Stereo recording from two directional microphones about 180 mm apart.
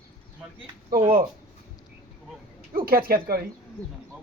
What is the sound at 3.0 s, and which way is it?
Speech, 55° right (ahead or behind).